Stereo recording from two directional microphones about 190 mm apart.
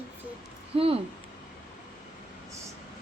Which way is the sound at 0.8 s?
30° right (ahead or behind).